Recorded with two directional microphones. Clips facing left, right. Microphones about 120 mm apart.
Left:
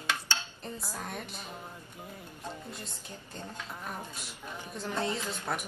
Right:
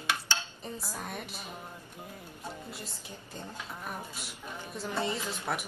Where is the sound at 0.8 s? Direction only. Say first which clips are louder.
Even; 5° right (ahead or behind).